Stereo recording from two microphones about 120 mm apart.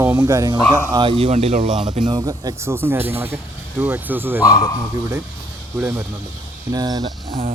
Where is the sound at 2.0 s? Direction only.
35° right (ahead or behind); by 3.1 s 20° right (ahead or behind).